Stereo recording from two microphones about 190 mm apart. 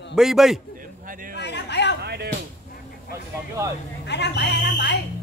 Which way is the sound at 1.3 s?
60° left (ahead or behind).